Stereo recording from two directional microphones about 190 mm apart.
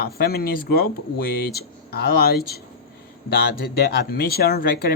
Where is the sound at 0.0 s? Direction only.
55° left (ahead or behind).